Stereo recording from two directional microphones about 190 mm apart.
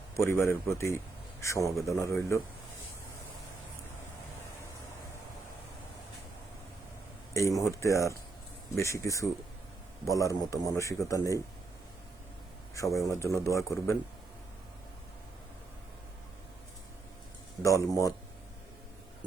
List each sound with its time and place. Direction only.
0.2 s a man's voice: 15° left (ahead or behind)
7.3 s a man's voice: 15° left (ahead or behind)
12.7 s a man's voice: 15° left (ahead or behind)
17.6 s a man's voice: 15° left (ahead or behind)